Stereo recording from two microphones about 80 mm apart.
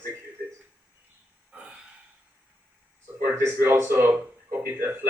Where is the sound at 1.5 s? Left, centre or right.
Centre.